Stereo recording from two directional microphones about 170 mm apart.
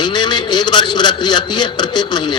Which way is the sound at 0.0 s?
25° left (ahead or behind).